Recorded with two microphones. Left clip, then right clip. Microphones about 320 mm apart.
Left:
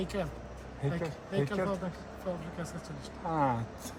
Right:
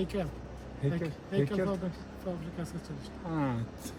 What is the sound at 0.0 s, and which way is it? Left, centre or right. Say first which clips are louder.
Speech: right 1 dB; centre.